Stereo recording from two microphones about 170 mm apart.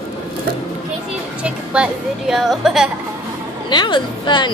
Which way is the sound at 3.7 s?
25° left (ahead or behind).